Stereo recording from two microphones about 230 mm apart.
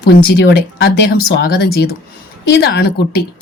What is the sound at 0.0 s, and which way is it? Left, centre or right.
Speech, left.